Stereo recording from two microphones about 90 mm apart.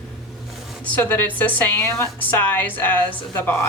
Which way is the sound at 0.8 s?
20° left (ahead or behind).